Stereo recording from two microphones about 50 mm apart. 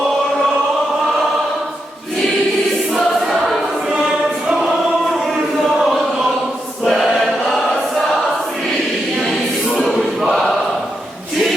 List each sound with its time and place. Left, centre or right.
2.9 s choir: centre
3.9 s choir: centre
5.7 s chant: centre
6.8 s choir: centre
9.7 s a sound: centre